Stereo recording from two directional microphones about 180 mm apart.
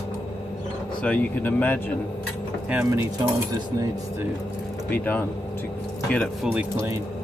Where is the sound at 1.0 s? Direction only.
10° left (ahead or behind).